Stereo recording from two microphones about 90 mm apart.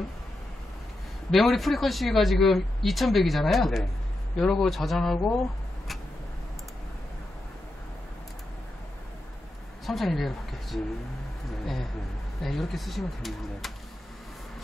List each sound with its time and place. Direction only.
1.3 s speech: centre (ahead or behind)
9.8 s speech: centre (ahead or behind)